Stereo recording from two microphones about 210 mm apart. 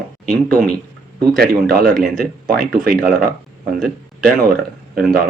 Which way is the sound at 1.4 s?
45° right (ahead or behind).